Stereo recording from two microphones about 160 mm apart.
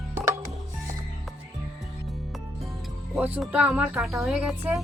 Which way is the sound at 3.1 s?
10° right (ahead or behind).